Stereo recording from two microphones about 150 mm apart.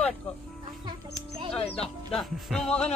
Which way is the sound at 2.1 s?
Centre (ahead or behind).